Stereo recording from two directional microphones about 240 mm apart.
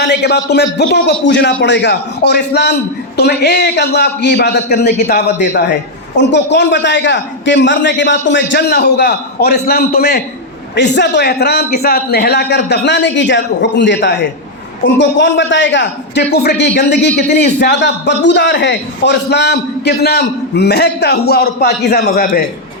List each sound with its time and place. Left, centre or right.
0.0 s a man's voice: left